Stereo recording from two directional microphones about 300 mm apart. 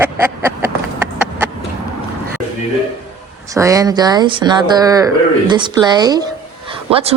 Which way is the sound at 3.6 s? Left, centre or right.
Centre.